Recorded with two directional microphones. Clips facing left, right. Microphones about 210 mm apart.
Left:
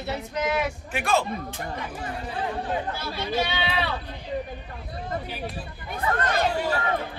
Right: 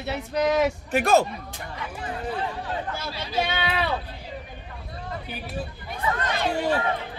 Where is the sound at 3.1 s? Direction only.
50° left (ahead or behind).